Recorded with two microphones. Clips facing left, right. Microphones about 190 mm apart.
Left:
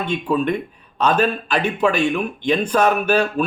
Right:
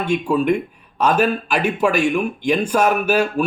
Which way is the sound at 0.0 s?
10° right (ahead or behind).